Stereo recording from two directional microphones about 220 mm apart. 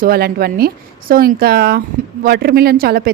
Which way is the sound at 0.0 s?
45° right (ahead or behind).